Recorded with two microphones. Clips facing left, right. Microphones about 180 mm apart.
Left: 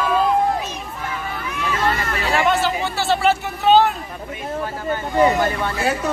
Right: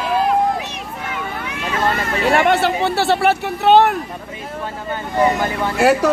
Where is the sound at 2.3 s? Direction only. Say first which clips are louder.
Right 3 dB; 60° right (ahead or behind).